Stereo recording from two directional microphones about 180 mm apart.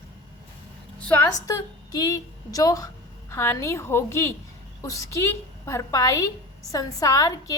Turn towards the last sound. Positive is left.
turn(degrees=20)  # may be behind; listen again after turning